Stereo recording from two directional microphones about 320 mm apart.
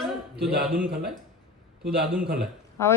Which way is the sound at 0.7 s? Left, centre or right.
Right.